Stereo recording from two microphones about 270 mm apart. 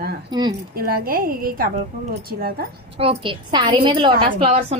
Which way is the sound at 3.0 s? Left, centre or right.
Centre.